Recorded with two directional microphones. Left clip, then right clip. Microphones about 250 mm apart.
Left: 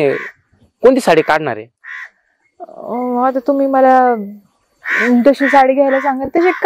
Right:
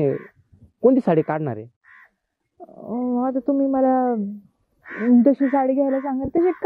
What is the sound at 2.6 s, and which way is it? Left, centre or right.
Speech, left.